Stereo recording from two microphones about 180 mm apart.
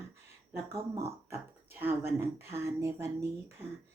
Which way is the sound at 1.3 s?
10° right (ahead or behind).